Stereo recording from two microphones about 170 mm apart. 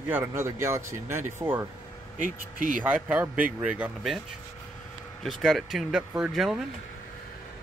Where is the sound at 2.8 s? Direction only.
10° right (ahead or behind).